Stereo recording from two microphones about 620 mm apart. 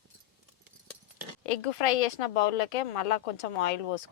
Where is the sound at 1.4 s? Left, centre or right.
Left.